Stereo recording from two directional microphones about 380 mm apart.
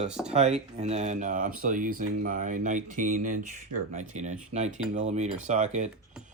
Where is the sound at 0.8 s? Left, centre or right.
Centre.